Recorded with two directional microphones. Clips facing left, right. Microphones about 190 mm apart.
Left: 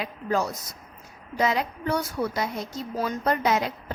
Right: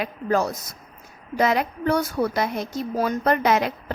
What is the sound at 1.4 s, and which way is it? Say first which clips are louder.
A woman's voice: right 4 dB; 70° right (ahead or behind).